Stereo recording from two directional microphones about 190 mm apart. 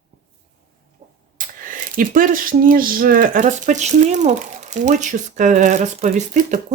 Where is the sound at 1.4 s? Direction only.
45° right (ahead or behind).